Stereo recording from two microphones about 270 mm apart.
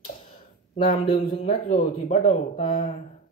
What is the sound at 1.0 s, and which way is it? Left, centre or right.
Speech, centre.